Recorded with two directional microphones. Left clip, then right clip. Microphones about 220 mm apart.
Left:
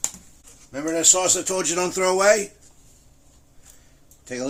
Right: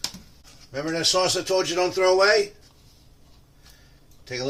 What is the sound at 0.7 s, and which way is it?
Speech, 35° left (ahead or behind).